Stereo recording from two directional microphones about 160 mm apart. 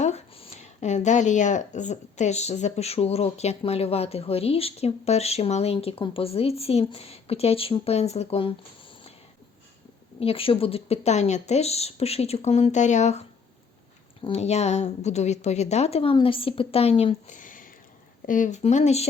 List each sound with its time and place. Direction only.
0.0 s speech: 45° left (ahead or behind)
10.2 s speech: 35° left (ahead or behind)